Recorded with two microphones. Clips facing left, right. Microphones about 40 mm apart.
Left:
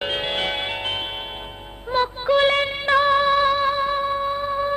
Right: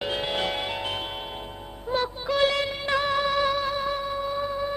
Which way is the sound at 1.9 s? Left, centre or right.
Left.